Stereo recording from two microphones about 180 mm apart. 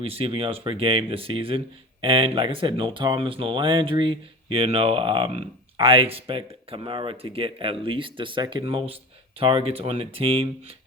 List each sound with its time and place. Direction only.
0.0 s speech: 35° right (ahead or behind)